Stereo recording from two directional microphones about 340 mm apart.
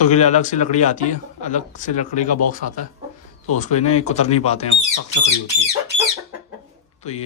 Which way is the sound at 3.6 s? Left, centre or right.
Centre.